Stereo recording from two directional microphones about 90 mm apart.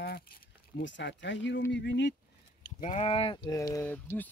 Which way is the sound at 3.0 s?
90° left.